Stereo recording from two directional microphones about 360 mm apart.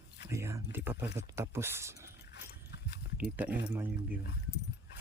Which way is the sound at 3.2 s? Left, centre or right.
Centre.